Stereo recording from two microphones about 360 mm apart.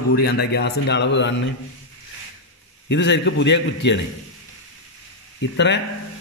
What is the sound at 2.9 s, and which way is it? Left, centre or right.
Speech, left.